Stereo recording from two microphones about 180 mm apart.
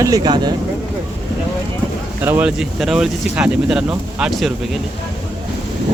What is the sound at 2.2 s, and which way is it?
Speech, 10° right (ahead or behind).